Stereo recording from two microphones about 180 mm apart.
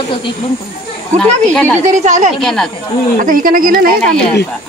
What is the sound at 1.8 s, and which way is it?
Speech, 40° right (ahead or behind).